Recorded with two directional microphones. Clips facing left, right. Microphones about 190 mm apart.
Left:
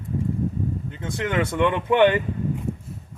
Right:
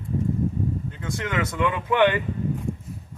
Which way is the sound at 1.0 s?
30° left (ahead or behind).